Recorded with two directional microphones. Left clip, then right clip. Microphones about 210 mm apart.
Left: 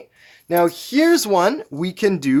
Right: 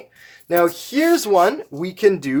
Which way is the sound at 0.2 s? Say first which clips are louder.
Even; 25° left (ahead or behind).